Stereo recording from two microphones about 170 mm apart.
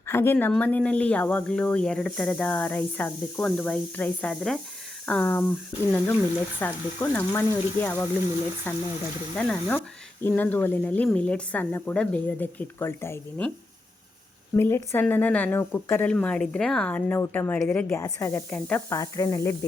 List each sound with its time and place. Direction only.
0.1 s speech: 15° left (ahead or behind)
14.5 s speech: 15° left (ahead or behind)